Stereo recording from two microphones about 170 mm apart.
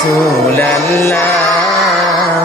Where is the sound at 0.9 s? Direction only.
15° left (ahead or behind).